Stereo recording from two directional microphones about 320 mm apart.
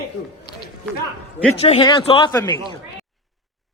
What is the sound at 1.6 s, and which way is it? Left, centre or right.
A man's voice, centre.